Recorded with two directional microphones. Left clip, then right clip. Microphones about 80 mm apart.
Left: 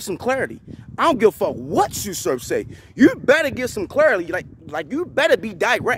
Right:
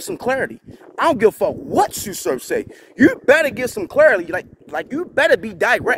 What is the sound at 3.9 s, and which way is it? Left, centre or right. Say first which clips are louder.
Speech: right 4 dB; centre.